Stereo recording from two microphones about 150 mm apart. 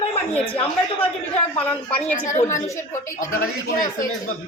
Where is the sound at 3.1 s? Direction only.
85° left.